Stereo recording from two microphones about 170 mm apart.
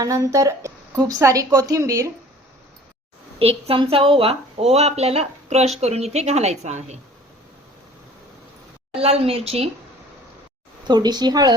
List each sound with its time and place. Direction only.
0.0 s a woman's voice: 20° right (ahead or behind)
3.3 s speech: 35° right (ahead or behind)
9.0 s speech: 35° right (ahead or behind)
10.8 s a woman's voice: 25° right (ahead or behind)